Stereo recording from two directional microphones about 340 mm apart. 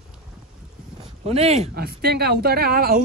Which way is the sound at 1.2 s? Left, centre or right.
Centre.